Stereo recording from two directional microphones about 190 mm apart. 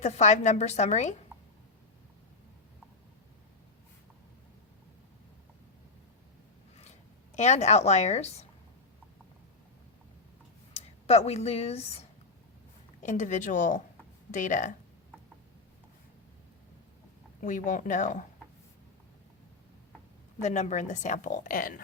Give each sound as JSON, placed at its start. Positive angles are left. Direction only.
{"t": 0.0, "sound": "a woman's voice", "side_deg": 35}
{"t": 7.3, "sound": "a woman's voice", "side_deg": 35}
{"t": 10.8, "sound": "a woman's voice", "side_deg": 35}
{"t": 17.4, "sound": "a woman's voice", "side_deg": 40}
{"t": 20.4, "sound": "a woman's voice", "side_deg": 40}